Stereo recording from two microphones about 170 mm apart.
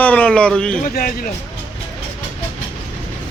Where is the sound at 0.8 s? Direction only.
55° left (ahead or behind).